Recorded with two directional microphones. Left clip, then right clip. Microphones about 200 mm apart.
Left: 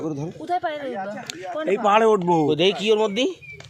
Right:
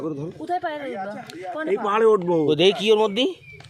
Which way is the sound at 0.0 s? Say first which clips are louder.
Even; 35° left (ahead or behind).